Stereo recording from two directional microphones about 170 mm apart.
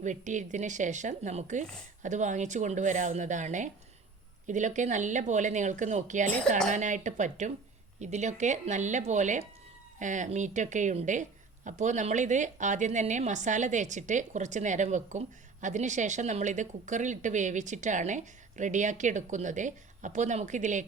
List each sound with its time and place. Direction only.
0.0 s a woman's voice: 45° right (ahead or behind)